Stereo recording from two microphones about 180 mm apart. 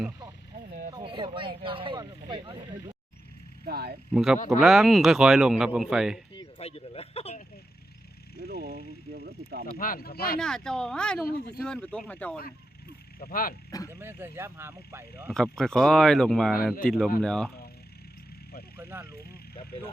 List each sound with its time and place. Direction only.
0.9 s speech: 25° right (ahead or behind)
3.7 s speech: 60° right (ahead or behind)
4.1 s a man's voice: 5° right (ahead or behind)
6.6 s speech: 35° left (ahead or behind)
8.4 s speech: 55° right (ahead or behind)
9.7 s speech: 55° left (ahead or behind)
10.4 s a man's voice: 5° left (ahead or behind)
11.3 s speech: 60° left (ahead or behind)
11.6 s a man's voice: 5° left (ahead or behind)
13.1 s speech: 55° left (ahead or behind)
13.7 s speech: 20° left (ahead or behind)
14.0 s speech: 15° right (ahead or behind)
15.3 s a man's voice: 5° left (ahead or behind)
18.8 s vehicle: 10° right (ahead or behind)